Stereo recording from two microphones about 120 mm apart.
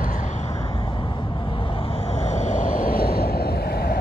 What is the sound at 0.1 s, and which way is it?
Vehicle, 90° left.